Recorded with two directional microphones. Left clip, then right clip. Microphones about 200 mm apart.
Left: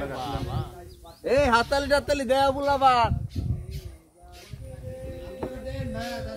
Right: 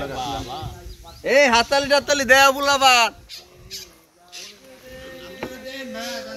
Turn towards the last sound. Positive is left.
turn(degrees=25)  # may be behind; listen again after turning